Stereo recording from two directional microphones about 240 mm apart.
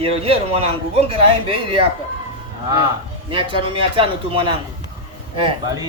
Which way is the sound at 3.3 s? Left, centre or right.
Right.